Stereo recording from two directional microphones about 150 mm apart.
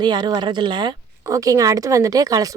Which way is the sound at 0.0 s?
25° right (ahead or behind).